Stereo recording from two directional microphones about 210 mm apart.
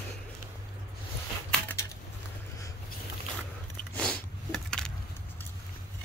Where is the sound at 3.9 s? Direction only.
5° left (ahead or behind).